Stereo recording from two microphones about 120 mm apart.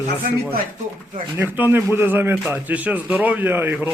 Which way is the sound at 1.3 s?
15° right (ahead or behind).